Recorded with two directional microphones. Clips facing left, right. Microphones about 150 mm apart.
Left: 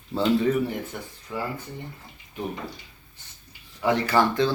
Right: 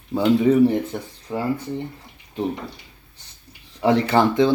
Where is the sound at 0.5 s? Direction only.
25° right (ahead or behind).